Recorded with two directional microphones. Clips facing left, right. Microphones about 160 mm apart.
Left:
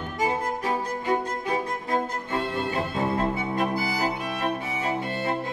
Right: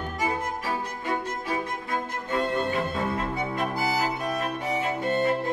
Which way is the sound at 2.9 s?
35° left (ahead or behind).